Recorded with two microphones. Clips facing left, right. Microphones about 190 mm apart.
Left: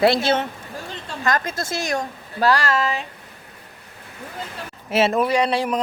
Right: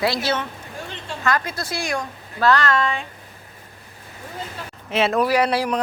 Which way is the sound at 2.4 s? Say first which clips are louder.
Right 1 dB; 10° left (ahead or behind).